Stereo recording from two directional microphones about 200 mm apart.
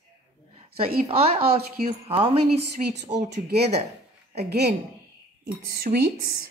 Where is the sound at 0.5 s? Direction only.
30° right (ahead or behind).